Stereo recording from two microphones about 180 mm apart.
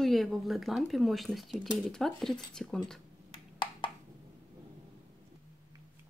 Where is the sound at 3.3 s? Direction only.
25° left (ahead or behind).